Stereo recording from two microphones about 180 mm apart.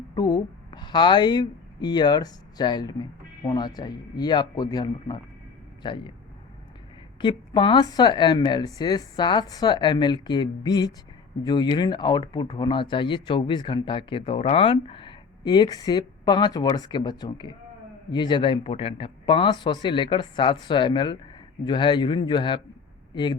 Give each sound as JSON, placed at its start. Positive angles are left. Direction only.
{"t": 0.1, "sound": "a woman's voice", "side_deg": 25}
{"t": 7.2, "sound": "speech", "side_deg": 25}